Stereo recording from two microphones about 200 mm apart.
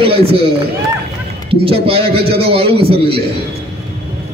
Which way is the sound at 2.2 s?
50° right (ahead or behind).